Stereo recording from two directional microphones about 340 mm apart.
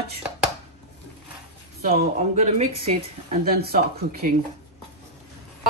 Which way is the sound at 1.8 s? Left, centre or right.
Right.